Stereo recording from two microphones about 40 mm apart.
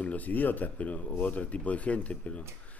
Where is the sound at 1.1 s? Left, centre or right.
Left.